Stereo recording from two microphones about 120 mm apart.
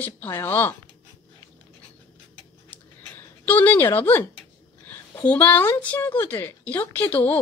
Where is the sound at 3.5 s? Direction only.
15° left (ahead or behind).